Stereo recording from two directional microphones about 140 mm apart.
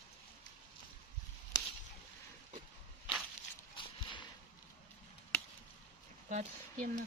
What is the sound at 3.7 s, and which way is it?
Horse, 35° left (ahead or behind).